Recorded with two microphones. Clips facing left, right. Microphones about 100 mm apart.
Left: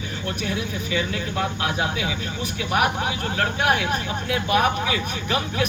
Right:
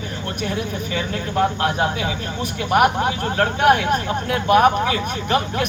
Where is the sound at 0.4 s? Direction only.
45° right (ahead or behind).